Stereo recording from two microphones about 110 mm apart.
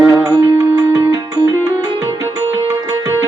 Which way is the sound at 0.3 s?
30° right (ahead or behind).